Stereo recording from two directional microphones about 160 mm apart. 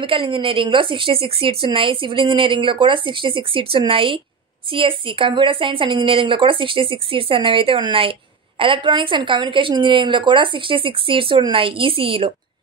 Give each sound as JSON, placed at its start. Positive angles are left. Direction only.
{"t": 0.0, "sound": "a woman's voice", "side_deg": -30}